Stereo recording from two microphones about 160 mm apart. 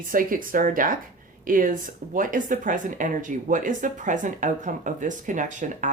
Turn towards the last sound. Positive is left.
turn(degrees=-50)  # may be behind; listen again after turning